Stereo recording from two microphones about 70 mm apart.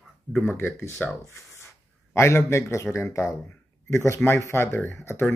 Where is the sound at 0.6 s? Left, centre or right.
Left.